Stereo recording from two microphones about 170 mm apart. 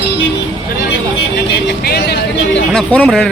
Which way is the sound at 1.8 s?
65° left (ahead or behind).